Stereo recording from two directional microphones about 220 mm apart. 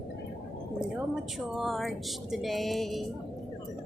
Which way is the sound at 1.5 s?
Centre (ahead or behind).